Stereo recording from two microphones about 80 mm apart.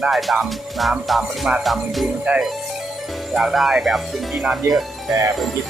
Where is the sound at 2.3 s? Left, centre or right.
Centre.